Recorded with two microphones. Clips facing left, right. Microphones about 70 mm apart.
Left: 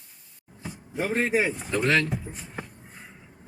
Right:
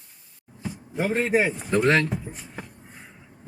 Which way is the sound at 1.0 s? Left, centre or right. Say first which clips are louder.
Right 2 dB; right.